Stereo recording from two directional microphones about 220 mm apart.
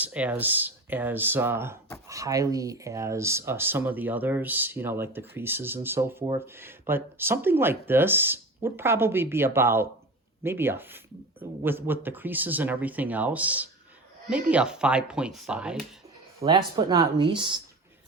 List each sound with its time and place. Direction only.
0.0 s speech: 5° right (ahead or behind)
16.4 s speech: 20° right (ahead or behind)